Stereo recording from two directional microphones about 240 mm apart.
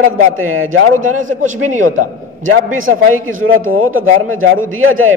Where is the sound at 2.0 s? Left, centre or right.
Right.